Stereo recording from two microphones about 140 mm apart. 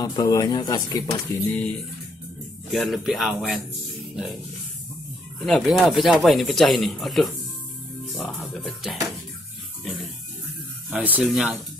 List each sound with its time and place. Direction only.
0.0 s speech: 25° left (ahead or behind)
1.5 s speech: 10° left (ahead or behind)
5.4 s speech: centre (ahead or behind)
9.8 s music: centre (ahead or behind)
10.9 s speech: 10° right (ahead or behind)